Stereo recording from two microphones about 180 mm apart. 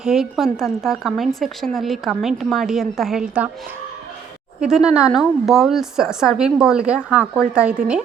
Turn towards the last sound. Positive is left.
turn(degrees=-5)  # may be behind; listen again after turning